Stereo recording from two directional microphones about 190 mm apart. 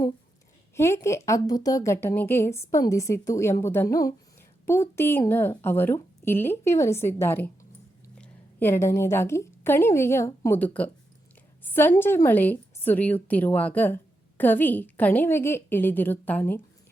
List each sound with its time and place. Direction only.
0.8 s a woman's voice: 15° left (ahead or behind)